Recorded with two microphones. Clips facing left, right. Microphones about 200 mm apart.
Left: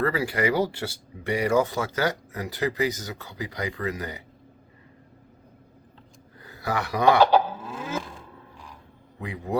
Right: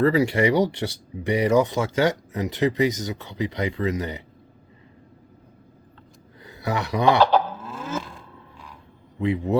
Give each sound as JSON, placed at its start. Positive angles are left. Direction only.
{"t": 0.0, "sound": "speech", "side_deg": -25}
{"t": 6.4, "sound": "speech", "side_deg": -20}
{"t": 7.2, "sound": "livestock", "side_deg": 15}
{"t": 7.7, "sound": "a sound", "side_deg": 15}
{"t": 9.2, "sound": "speech", "side_deg": -25}